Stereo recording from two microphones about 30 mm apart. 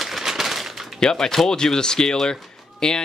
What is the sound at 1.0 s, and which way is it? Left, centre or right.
Speech, left.